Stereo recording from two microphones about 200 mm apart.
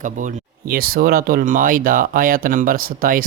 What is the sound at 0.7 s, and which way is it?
Speech, 45° right (ahead or behind).